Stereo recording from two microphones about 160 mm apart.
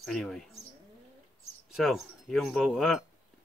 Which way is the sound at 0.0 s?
5° left (ahead or behind).